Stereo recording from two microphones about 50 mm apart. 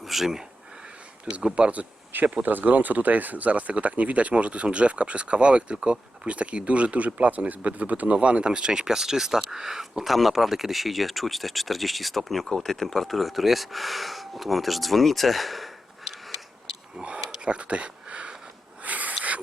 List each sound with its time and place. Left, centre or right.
0.0 s speech: centre
1.5 s speech: right; by 16.1 s centre
17.0 s a sound: centre